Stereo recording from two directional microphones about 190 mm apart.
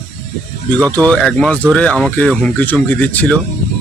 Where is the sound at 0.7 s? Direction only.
5° left (ahead or behind).